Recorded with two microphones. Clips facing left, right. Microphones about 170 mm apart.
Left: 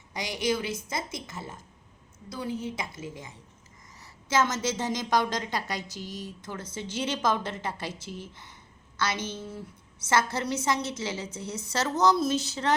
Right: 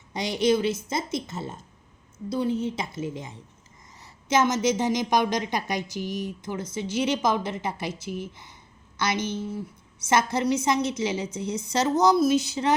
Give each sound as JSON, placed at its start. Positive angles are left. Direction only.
{"t": 0.1, "sound": "a woman's voice", "side_deg": -25}